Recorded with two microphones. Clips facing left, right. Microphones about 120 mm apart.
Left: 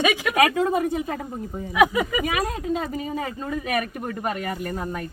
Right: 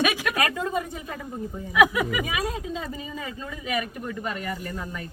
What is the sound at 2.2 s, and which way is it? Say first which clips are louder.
Speech: left 4 dB; 65° left (ahead or behind).